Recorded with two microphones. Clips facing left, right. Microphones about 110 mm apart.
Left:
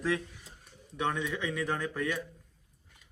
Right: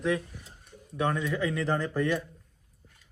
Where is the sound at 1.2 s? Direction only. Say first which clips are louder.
Right 4 dB; centre (ahead or behind).